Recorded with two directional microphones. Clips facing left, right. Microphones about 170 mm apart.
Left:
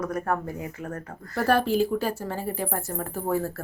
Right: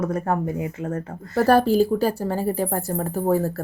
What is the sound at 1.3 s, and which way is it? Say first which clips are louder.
Speech: right 6 dB; 40° right (ahead or behind).